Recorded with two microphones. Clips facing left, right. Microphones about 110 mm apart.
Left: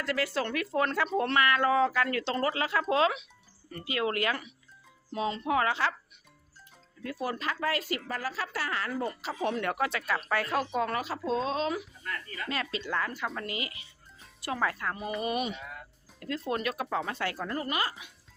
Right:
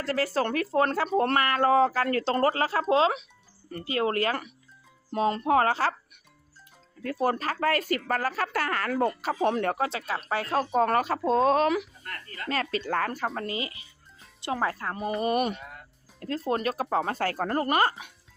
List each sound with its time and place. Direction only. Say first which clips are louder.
0.0 s speech: right 4 dB; 35° right (ahead or behind)
7.0 s speech: right 6 dB; 50° right (ahead or behind)
10.8 s speech: right 7 dB; 50° right (ahead or behind)
12.0 s speech: right 1 dB; 35° right (ahead or behind)
15.4 s speech: right 6 dB; 50° right (ahead or behind)
16.5 s speech: right 5 dB; 35° right (ahead or behind)